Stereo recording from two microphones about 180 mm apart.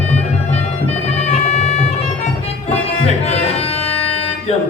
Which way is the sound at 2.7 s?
35° left (ahead or behind).